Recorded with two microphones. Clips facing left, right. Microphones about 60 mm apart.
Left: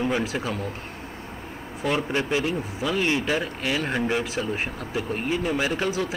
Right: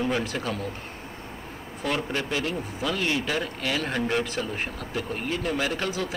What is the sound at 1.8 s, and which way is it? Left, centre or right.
Speech, centre.